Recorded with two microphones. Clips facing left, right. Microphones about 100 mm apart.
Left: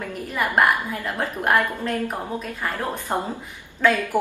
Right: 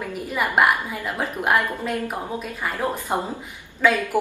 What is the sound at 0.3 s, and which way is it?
A woman's voice, 5° right (ahead or behind).